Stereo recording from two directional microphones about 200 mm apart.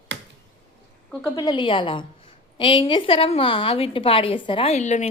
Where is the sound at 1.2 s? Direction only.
20° left (ahead or behind).